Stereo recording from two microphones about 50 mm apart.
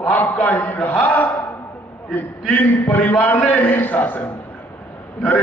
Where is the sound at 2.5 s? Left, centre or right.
Left.